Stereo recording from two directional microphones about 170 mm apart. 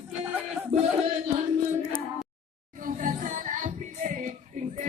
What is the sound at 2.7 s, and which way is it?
Music, 50° right (ahead or behind).